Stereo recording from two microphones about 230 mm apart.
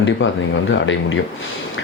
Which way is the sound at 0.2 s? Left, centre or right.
Left.